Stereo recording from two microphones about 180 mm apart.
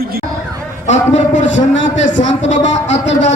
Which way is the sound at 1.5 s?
90° left.